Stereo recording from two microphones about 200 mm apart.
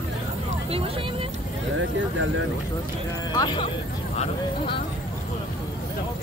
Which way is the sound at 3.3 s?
20° left (ahead or behind).